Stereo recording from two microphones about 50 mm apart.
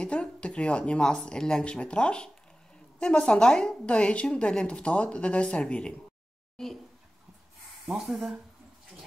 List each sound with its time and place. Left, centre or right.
0.0 s a woman's voice: left
6.5 s speech: centre
7.8 s speech: centre